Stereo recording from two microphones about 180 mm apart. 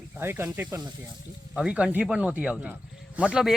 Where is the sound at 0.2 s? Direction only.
15° right (ahead or behind).